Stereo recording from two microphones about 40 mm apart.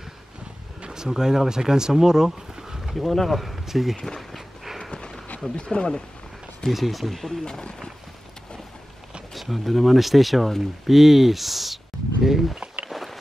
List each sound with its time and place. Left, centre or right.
0.8 s speech: centre
3.1 s speech: centre
3.9 s speech: centre
5.6 s speech: left
6.7 s speech: centre
7.4 s speech: centre
9.3 s speech: centre
12.9 s a sound: centre